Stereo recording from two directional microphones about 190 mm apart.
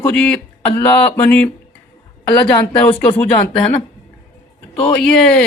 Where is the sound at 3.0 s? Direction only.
10° left (ahead or behind).